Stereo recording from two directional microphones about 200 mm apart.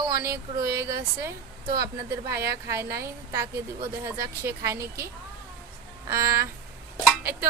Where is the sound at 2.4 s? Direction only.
15° right (ahead or behind).